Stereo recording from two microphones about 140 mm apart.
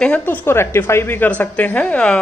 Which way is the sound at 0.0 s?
10° left (ahead or behind).